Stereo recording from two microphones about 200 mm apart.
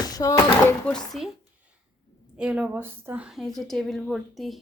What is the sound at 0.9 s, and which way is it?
Speech, centre (ahead or behind).